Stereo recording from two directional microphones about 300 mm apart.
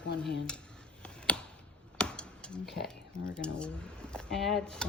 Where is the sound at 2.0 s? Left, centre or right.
Centre.